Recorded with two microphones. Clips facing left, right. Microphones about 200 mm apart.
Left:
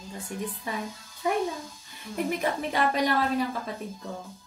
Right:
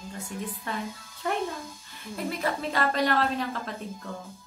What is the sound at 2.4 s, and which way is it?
A woman's voice, 15° left (ahead or behind).